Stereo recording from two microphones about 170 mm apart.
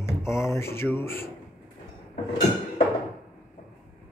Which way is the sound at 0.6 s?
15° left (ahead or behind).